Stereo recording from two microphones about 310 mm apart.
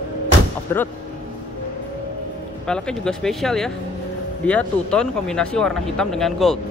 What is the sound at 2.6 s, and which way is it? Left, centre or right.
A man's voice, centre.